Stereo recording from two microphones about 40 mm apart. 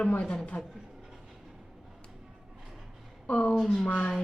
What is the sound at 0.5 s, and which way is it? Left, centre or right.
Speech, left.